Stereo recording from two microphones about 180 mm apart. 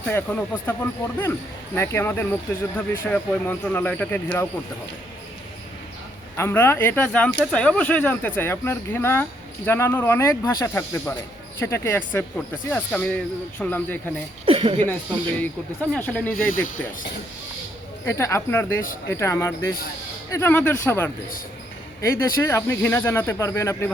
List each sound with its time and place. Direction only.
0.1 s speech: 15° left (ahead or behind)
6.3 s speech: 15° left (ahead or behind)
14.4 s speech: 30° right (ahead or behind)
15.4 s speech: 10° left (ahead or behind)
18.0 s speech: 15° left (ahead or behind)